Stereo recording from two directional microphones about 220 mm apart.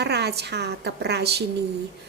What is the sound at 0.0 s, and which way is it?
A woman's voice, 50° right (ahead or behind).